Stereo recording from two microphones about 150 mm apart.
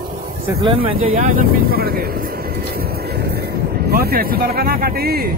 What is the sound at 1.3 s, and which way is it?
Speech, 70° right (ahead or behind).